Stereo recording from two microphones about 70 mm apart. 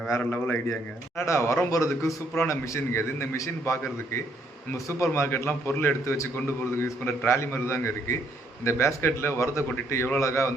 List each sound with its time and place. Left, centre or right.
0.2 s a man's voice: left
0.7 s a man's voice: left